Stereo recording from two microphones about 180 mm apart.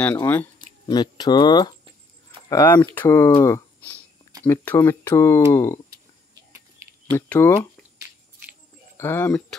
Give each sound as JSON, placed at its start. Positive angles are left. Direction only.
{"t": 0.0, "sound": "speech", "side_deg": 10}
{"t": 0.8, "sound": "speech", "side_deg": 25}
{"t": 2.5, "sound": "speech", "side_deg": 10}
{"t": 7.1, "sound": "speech", "side_deg": 15}
{"t": 8.9, "sound": "speech", "side_deg": 15}